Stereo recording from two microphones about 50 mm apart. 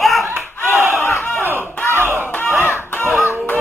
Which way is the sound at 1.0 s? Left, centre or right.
Left.